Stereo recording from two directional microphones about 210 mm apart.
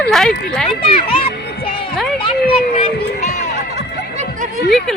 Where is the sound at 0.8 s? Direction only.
25° left (ahead or behind).